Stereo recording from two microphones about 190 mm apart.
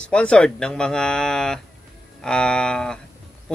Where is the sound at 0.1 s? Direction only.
5° left (ahead or behind).